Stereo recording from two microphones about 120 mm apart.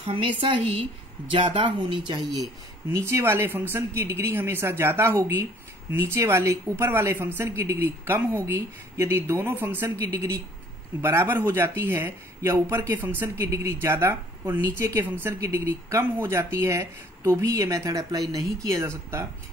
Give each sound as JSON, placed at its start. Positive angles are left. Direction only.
{"t": 0.0, "sound": "a woman's voice", "side_deg": -50}